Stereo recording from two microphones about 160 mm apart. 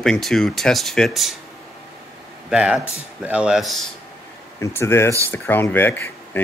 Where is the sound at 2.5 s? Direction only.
5° right (ahead or behind).